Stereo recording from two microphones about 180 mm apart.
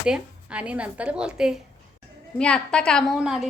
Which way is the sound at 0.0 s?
5° right (ahead or behind).